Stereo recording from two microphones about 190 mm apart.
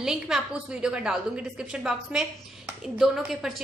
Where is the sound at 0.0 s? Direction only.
Centre (ahead or behind).